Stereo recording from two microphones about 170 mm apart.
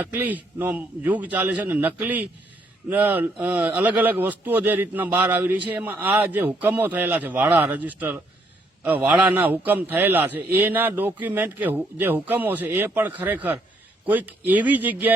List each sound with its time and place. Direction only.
0.0 s a man's voice: 10° right (ahead or behind)